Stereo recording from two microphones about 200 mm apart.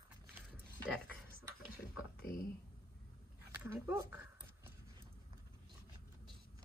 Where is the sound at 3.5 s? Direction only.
10° right (ahead or behind).